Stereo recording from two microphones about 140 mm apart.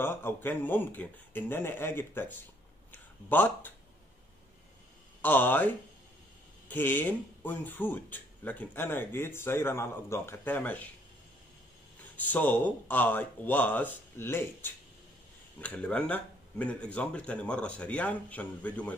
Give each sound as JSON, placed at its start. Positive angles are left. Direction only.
{"t": 0.0, "sound": "speech", "side_deg": 15}
{"t": 5.2, "sound": "speech", "side_deg": 15}
{"t": 12.0, "sound": "speech", "side_deg": 10}